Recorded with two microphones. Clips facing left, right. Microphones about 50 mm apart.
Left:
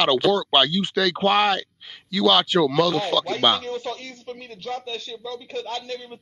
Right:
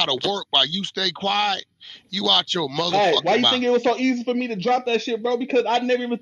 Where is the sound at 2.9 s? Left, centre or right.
Right.